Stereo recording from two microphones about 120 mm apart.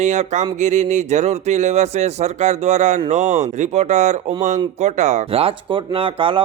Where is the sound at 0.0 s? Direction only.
75° right (ahead or behind).